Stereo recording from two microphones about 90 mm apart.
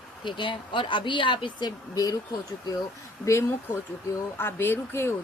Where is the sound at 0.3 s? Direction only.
65° left (ahead or behind); by 2.1 s 50° left (ahead or behind).